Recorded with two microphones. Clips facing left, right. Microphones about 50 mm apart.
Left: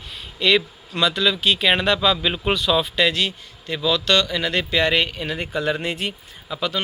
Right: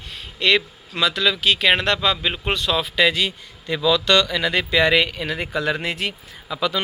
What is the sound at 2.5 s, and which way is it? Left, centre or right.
Speech, right.